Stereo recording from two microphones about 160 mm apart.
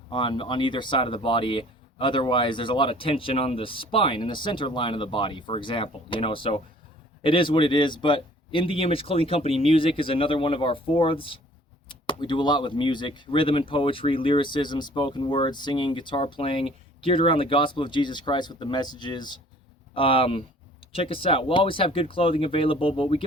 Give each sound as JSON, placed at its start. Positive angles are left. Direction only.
{"t": 0.1, "sound": "speech", "side_deg": 30}